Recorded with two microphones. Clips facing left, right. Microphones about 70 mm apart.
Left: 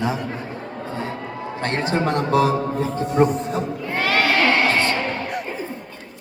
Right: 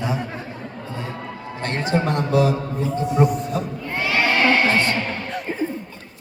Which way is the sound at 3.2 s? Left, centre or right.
Left.